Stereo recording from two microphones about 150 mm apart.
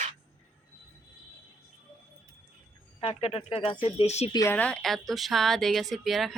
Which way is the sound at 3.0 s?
40° left (ahead or behind).